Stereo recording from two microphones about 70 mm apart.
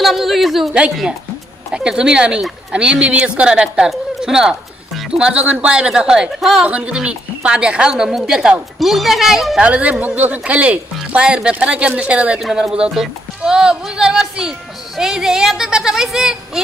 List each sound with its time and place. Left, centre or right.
0.0 s speech: centre
1.7 s a woman's voice: centre
9.6 s a woman's voice: centre
12.4 s a woman's voice: centre